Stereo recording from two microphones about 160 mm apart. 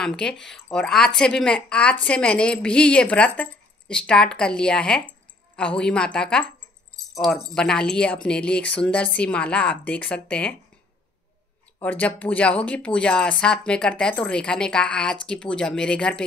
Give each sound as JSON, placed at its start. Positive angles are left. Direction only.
{"t": 0.0, "sound": "speech", "side_deg": 5}
{"t": 7.5, "sound": "speech", "side_deg": 5}
{"t": 11.8, "sound": "speech", "side_deg": 10}